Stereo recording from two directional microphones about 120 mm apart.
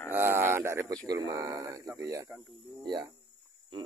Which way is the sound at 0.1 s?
20° right (ahead or behind).